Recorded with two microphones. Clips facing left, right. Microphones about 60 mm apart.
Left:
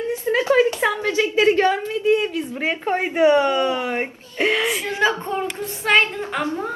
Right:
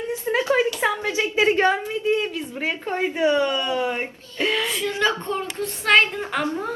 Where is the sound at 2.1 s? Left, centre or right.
Centre.